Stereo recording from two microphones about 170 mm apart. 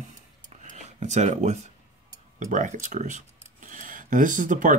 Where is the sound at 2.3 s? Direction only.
50° right (ahead or behind).